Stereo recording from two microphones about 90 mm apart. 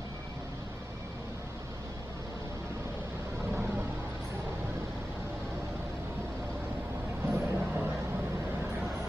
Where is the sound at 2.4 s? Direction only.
30° right (ahead or behind).